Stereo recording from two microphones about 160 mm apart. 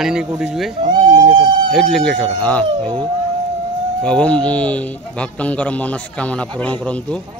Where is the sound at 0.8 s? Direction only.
30° right (ahead or behind).